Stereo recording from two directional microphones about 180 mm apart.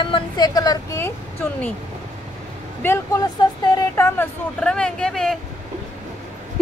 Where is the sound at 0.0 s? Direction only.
25° left (ahead or behind).